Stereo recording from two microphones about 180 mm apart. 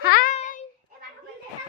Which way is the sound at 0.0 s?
55° left (ahead or behind).